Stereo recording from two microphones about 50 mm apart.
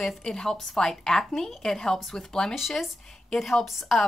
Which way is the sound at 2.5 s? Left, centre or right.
Centre.